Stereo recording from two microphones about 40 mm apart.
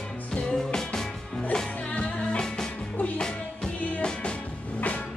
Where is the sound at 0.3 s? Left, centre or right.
Centre.